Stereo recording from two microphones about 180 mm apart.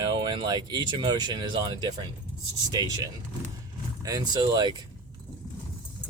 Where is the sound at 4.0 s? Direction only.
20° right (ahead or behind).